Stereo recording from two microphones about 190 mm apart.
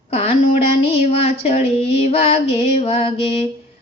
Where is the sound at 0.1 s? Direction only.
35° left (ahead or behind).